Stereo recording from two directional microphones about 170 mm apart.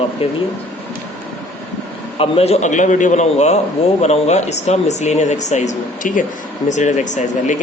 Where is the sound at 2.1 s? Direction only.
35° left (ahead or behind).